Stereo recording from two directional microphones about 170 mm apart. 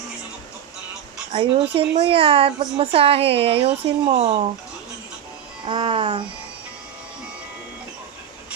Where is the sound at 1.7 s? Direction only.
35° right (ahead or behind).